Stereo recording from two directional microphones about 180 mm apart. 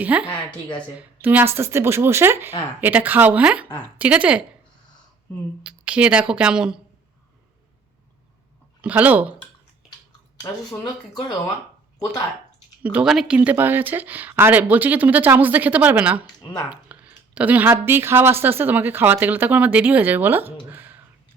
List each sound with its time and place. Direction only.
0.0 s speech: 10° right (ahead or behind)
5.6 s speech: 5° right (ahead or behind)
8.8 s speech: 10° right (ahead or behind)
10.4 s speech: 20° left (ahead or behind)
12.8 s speech: 5° right (ahead or behind)
16.2 s speech: 25° left (ahead or behind)
16.6 s speech: 10° right (ahead or behind)
20.7 s a sound: 10° right (ahead or behind)